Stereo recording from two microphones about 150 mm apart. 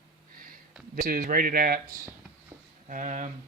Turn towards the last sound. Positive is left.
turn(degrees=-55)  # may be behind; listen again after turning